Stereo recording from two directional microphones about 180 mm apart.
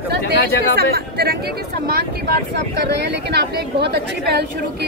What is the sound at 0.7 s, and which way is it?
Speech, 60° right (ahead or behind).